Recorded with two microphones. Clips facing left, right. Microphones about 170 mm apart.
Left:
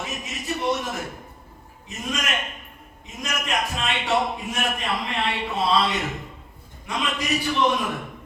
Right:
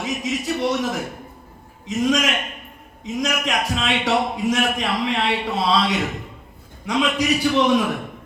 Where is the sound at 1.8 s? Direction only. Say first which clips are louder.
Right 10 dB; 90° right.